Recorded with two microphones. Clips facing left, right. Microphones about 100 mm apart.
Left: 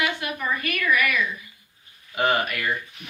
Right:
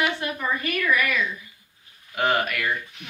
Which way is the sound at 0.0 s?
35° right (ahead or behind).